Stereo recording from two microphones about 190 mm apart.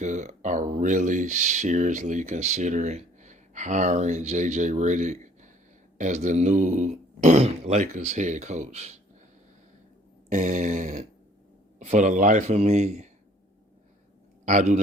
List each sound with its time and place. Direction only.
0.0 s speech: 40° right (ahead or behind)
10.3 s speech: 40° right (ahead or behind)
14.4 s a man's voice: 40° right (ahead or behind)